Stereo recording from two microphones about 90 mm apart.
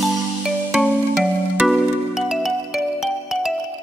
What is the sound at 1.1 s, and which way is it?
Music, 10° right (ahead or behind).